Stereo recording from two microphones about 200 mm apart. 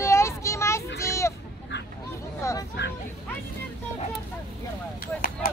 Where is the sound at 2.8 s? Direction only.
60° left (ahead or behind).